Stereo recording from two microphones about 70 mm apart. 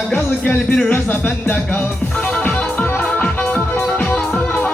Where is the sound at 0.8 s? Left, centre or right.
Left.